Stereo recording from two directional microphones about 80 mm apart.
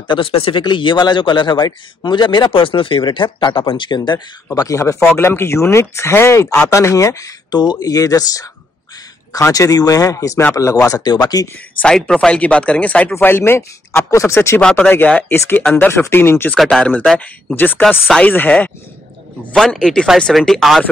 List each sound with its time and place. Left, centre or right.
0.1 s speech: left
4.6 s speech: left
5.1 s speech: left
7.5 s speech: left
9.5 s speech: left
11.1 s speech: left
11.8 s speech: centre
13.1 s speech: left
14.6 s speech: centre
15.0 s speech: left
15.3 s speech: left
19.5 s speech: centre